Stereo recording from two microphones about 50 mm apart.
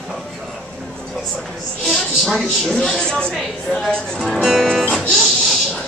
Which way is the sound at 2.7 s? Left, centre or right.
Centre.